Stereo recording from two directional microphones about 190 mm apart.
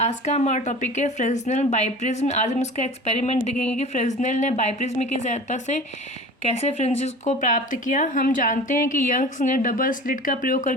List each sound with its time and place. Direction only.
0.0 s speech: 35° left (ahead or behind)